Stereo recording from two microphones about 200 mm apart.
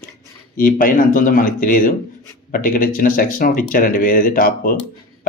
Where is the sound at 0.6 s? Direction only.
45° left (ahead or behind).